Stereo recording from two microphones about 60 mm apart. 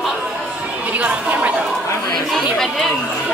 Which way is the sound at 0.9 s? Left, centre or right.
Right.